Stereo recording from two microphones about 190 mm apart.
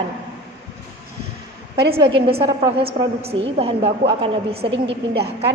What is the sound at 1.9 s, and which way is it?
A woman's voice, 25° right (ahead or behind).